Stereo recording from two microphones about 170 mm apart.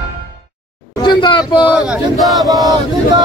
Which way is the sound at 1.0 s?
25° left (ahead or behind).